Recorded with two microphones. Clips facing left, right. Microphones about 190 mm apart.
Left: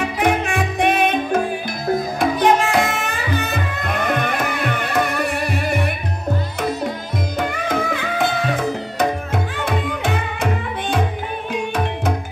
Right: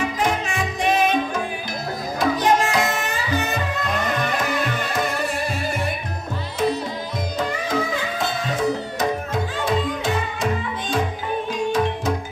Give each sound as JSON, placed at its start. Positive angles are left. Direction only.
{"t": 0.2, "sound": "music", "side_deg": 60}
{"t": 7.3, "sound": "music", "side_deg": 60}